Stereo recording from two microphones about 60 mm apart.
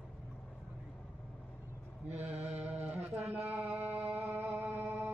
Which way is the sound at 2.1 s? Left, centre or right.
Right.